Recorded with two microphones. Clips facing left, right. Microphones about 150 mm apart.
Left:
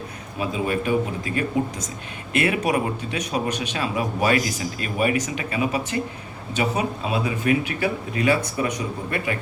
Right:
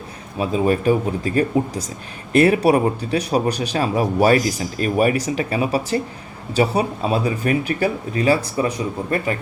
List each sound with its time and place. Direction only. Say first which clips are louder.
0.3 s a man's voice: right 6 dB; 35° right (ahead or behind)